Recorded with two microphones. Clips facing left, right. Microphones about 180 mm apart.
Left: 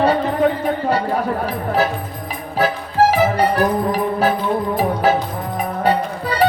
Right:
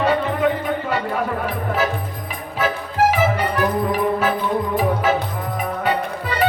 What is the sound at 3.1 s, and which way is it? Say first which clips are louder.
Music: left 3 dB; 35° left (ahead or behind).